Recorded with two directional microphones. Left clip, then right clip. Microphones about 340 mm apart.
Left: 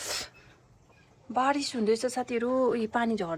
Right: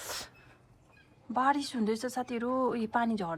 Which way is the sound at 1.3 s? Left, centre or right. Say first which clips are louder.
Left 2 dB; centre.